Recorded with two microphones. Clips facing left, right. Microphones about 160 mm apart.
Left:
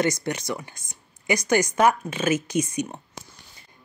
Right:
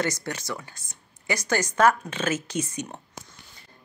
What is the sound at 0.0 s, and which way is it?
Speech, 20° left (ahead or behind).